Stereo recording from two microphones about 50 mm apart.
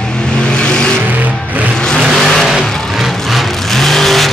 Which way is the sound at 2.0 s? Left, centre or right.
Centre.